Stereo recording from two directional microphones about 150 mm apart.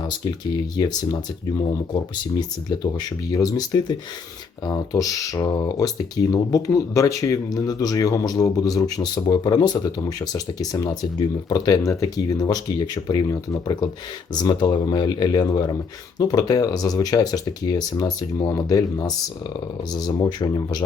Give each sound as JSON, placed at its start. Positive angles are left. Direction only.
{"t": 3.3, "sound": "speech", "side_deg": 25}